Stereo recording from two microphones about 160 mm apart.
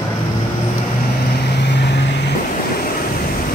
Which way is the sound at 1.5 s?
90° left.